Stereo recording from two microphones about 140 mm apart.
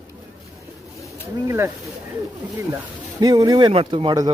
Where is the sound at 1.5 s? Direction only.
20° right (ahead or behind).